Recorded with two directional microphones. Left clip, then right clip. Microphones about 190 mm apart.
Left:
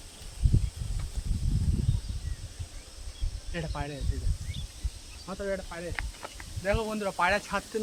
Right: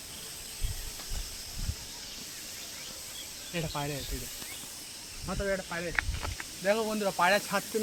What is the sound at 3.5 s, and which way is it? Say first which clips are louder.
Speech: right 2 dB; 15° right (ahead or behind).